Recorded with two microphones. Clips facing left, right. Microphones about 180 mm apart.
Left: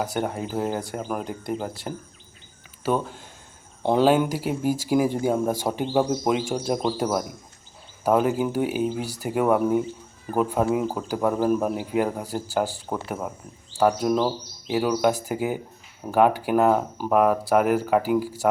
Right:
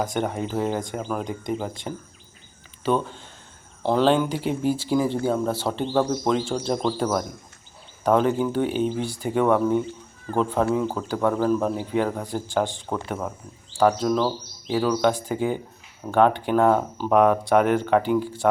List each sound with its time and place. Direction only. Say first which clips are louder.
0.0 s speech: right 1 dB; 5° left (ahead or behind)
3.8 s speech: left 1 dB; 20° left (ahead or behind)
4.3 s speech: right 1 dB; 5° left (ahead or behind)
14.1 s speech: even; 20° left (ahead or behind)